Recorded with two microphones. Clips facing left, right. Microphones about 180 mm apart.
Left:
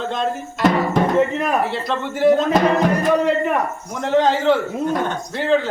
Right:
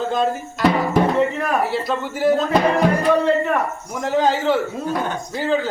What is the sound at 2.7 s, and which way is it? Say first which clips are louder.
Speech: even; 20° left (ahead or behind).